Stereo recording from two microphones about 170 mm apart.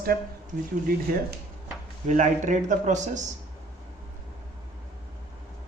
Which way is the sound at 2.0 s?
45° right (ahead or behind).